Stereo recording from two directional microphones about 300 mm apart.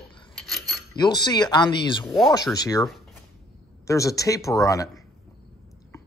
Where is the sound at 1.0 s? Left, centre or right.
Centre.